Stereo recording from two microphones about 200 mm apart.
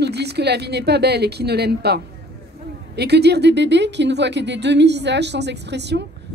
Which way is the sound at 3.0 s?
55° right (ahead or behind).